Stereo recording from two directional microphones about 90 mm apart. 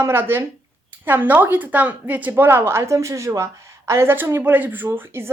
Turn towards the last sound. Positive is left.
turn(degrees=-25)  # may be behind; listen again after turning